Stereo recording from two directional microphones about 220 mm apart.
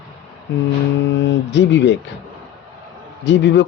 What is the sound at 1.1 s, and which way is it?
Speech, 55° left (ahead or behind).